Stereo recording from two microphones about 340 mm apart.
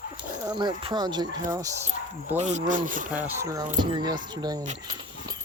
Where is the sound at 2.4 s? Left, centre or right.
Right.